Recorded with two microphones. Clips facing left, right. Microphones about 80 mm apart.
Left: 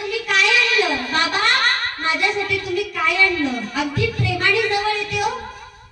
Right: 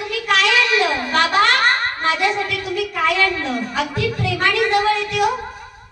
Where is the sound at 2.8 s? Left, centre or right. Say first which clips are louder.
Right 5 dB; right.